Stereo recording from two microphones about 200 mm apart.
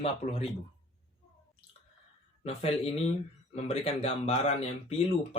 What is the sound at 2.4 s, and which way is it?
A man's voice, 30° left (ahead or behind).